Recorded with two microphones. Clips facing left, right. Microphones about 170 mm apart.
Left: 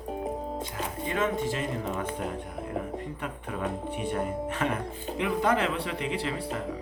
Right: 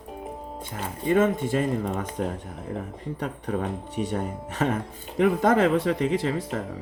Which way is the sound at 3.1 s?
40° right (ahead or behind).